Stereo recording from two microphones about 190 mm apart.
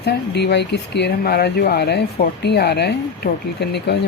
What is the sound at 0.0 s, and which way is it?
Speech, 60° left (ahead or behind).